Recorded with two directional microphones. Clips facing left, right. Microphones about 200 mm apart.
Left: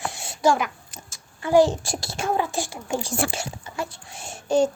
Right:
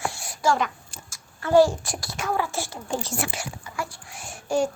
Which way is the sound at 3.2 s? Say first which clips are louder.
Left 4 dB; 25° left (ahead or behind).